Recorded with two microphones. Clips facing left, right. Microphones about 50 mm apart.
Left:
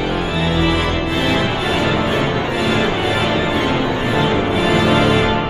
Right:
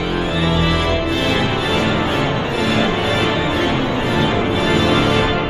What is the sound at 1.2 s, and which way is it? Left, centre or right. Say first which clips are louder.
Music: even; centre.